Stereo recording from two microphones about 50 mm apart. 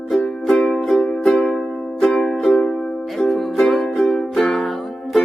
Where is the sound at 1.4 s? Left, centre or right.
Left.